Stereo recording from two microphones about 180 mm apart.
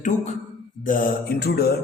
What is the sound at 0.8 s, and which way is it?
Mantra, 50° left (ahead or behind).